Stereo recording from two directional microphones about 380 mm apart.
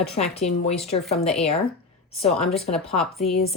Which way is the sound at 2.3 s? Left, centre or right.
Centre.